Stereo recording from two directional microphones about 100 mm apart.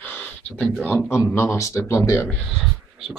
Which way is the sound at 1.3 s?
30° left (ahead or behind).